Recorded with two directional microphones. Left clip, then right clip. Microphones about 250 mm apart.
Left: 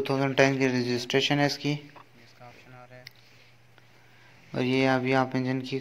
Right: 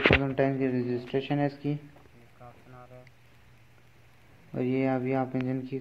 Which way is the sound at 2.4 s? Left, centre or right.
Left.